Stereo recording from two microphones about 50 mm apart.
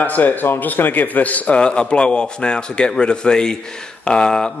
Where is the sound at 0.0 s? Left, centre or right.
Left.